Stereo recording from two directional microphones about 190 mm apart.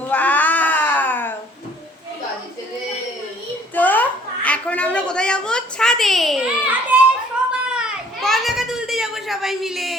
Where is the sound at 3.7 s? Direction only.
10° left (ahead or behind).